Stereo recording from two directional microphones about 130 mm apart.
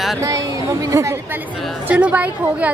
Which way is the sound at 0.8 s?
25° right (ahead or behind).